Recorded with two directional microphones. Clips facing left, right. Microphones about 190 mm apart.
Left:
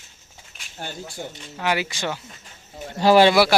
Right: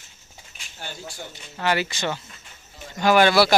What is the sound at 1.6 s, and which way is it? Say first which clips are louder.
Speech: even; 10° left (ahead or behind).